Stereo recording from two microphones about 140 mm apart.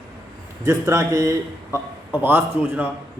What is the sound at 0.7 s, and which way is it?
A man's voice, 20° right (ahead or behind).